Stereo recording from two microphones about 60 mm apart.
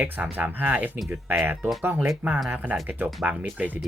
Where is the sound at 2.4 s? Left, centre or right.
Right.